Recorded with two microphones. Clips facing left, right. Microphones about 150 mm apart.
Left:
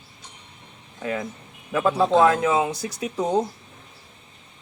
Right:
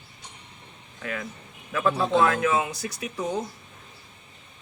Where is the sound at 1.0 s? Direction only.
25° left (ahead or behind).